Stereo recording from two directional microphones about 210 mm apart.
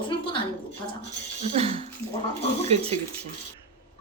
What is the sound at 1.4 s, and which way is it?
Speech, 30° right (ahead or behind).